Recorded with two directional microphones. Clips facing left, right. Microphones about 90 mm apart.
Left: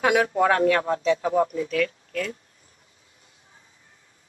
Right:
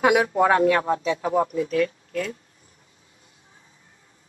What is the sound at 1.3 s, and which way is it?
Speech, 30° right (ahead or behind).